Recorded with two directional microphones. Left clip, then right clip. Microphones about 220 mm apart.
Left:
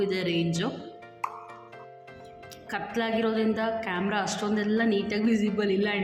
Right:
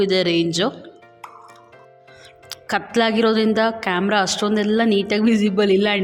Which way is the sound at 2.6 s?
45° right (ahead or behind).